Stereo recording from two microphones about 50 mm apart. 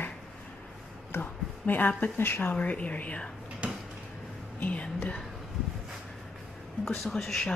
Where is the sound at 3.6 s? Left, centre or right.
Right.